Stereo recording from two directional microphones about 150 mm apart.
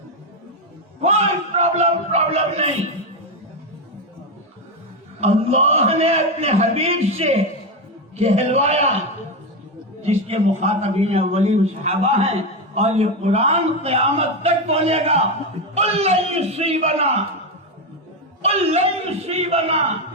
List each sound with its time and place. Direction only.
1.0 s a sound: 45° right (ahead or behind)
5.2 s a man's voice: 45° right (ahead or behind)
10.0 s a man's voice: 45° right (ahead or behind)
18.4 s a man's voice: 45° right (ahead or behind)